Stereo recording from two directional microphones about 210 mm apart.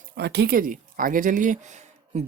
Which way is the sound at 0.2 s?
50° right (ahead or behind).